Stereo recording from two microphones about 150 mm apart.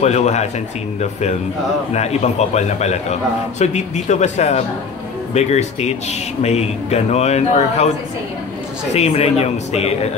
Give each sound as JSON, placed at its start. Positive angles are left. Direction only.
{"t": 0.0, "sound": "a man's voice", "side_deg": 50}
{"t": 2.0, "sound": "a man's voice", "side_deg": 45}
{"t": 8.9, "sound": "a man's voice", "side_deg": 45}